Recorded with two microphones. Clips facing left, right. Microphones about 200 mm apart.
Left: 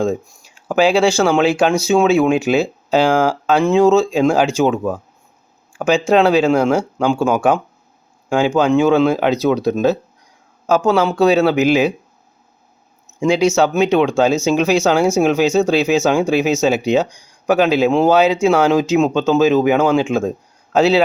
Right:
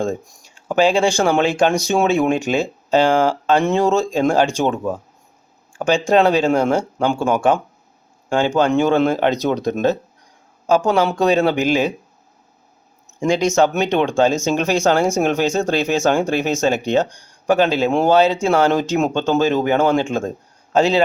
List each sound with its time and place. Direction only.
0.0 s speech: 5° left (ahead or behind)
13.6 s speech: 5° left (ahead or behind)